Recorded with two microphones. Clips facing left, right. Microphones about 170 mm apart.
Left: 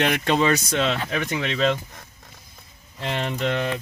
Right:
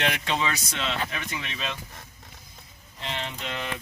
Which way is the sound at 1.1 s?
60° left (ahead or behind).